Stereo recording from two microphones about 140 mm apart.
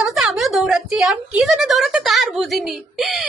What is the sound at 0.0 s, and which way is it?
A woman's voice, centre (ahead or behind).